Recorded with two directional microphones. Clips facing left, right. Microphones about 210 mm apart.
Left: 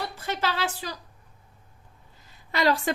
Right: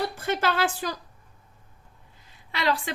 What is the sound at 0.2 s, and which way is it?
Speech, 50° right (ahead or behind).